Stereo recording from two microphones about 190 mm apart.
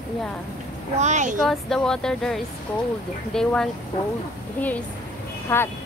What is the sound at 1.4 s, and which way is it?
Speech, centre (ahead or behind).